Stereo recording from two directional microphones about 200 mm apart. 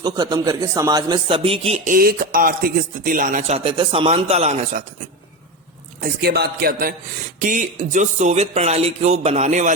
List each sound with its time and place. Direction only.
0.0 s a man's voice: 20° right (ahead or behind)
6.0 s a man's voice: 55° right (ahead or behind); by 9.7 s 35° right (ahead or behind)